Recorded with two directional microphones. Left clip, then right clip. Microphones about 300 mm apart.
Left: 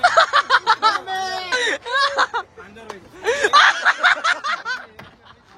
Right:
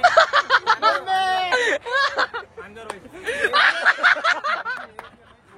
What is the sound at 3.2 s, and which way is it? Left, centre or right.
Snicker, centre.